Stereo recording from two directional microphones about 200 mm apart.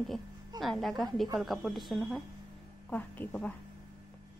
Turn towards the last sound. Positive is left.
turn(degrees=10)  # may be behind; listen again after turning